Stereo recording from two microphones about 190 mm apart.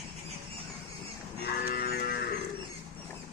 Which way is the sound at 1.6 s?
55° left (ahead or behind).